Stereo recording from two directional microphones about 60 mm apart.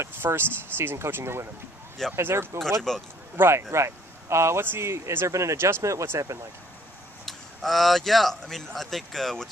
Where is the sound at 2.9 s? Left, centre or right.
Centre.